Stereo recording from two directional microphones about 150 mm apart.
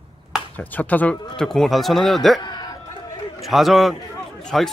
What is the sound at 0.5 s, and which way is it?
Speech, 10° left (ahead or behind).